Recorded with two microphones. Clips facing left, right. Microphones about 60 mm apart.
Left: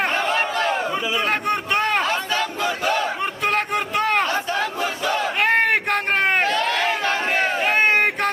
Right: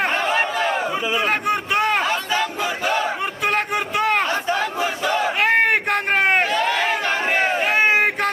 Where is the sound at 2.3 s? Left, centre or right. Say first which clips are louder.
Right 1 dB; centre.